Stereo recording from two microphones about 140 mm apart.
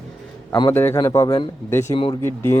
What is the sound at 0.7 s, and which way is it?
Speech, 15° left (ahead or behind).